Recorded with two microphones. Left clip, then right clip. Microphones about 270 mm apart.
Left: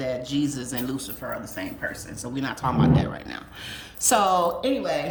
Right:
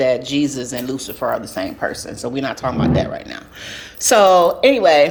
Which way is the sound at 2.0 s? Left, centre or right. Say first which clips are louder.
Right 8 dB; centre.